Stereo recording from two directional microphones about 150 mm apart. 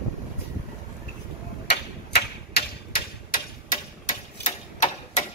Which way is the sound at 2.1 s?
90° left.